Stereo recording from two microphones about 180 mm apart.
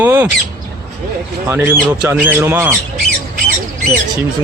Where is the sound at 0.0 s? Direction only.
10° right (ahead or behind).